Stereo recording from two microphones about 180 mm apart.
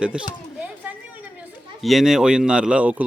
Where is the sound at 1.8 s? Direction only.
Centre (ahead or behind).